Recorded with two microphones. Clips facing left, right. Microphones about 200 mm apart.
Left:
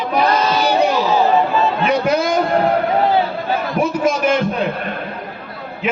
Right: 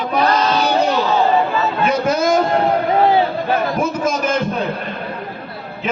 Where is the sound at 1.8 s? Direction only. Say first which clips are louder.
Right 3 dB; 45° right (ahead or behind).